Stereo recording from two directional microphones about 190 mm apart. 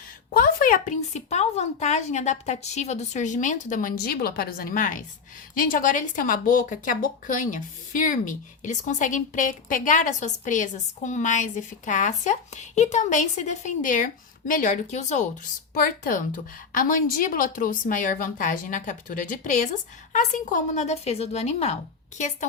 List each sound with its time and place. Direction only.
0.3 s a woman's voice: 45° left (ahead or behind)